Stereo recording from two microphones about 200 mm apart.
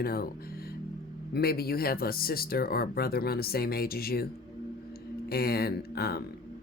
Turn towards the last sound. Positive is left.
turn(degrees=50)  # may be behind; listen again after turning